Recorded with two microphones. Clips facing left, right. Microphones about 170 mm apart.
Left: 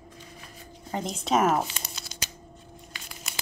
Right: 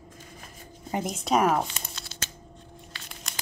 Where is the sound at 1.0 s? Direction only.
Centre (ahead or behind).